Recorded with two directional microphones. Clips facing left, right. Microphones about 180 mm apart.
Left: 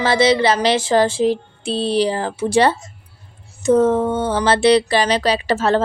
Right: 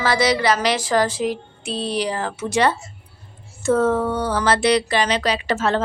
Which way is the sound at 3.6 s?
20° left (ahead or behind).